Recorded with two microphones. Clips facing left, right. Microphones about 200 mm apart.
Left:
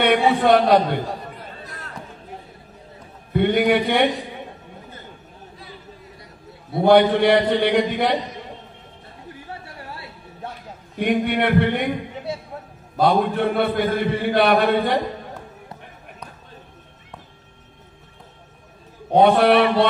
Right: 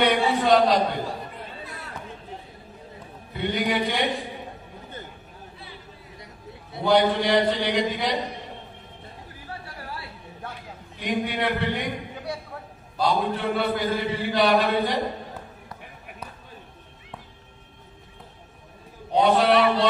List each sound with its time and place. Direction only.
0.0 s a man's voice: 60° left (ahead or behind)
3.3 s a man's voice: 60° left (ahead or behind)
6.7 s a man's voice: 55° left (ahead or behind)
11.0 s a man's voice: 60° left (ahead or behind)
12.3 s a sound: 25° left (ahead or behind)
12.9 s a man's voice: 55° left (ahead or behind)
19.1 s a man's voice: 60° left (ahead or behind)